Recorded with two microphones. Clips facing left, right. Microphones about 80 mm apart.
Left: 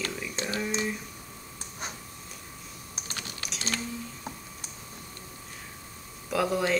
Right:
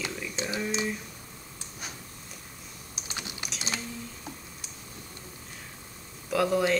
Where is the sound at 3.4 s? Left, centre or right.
Centre.